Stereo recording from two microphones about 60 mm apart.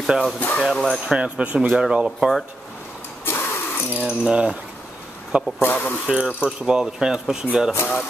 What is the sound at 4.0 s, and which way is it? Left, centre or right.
Speech, centre.